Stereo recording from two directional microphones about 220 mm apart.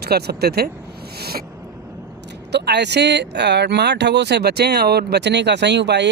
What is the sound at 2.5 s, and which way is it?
Speech, 50° right (ahead or behind).